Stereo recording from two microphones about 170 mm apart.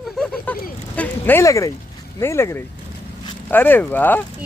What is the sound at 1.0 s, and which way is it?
Speech, 10° left (ahead or behind).